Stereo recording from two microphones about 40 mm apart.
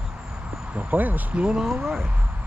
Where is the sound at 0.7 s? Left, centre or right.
Right.